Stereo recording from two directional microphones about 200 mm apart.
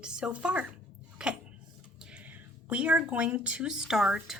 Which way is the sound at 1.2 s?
5° right (ahead or behind).